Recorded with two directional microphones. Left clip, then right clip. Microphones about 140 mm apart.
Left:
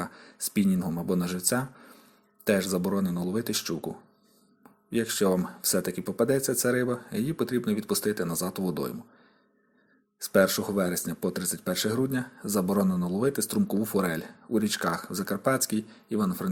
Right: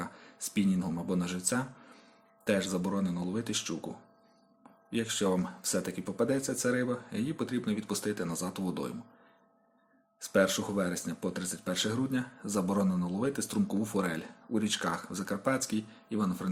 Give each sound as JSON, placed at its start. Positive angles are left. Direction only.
{"t": 0.0, "sound": "speech", "side_deg": 40}
{"t": 4.9, "sound": "speech", "side_deg": 40}
{"t": 10.2, "sound": "speech", "side_deg": 35}